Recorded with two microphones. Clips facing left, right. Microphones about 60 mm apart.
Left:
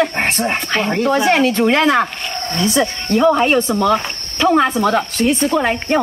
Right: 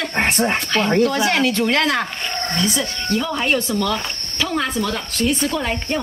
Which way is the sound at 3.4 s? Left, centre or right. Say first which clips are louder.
Left 5 dB; left.